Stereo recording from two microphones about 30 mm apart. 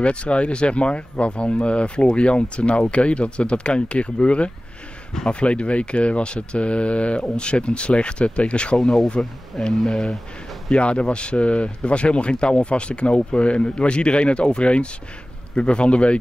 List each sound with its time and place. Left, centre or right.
0.0 s speech: left
8.7 s speech: centre
10.7 s speech: left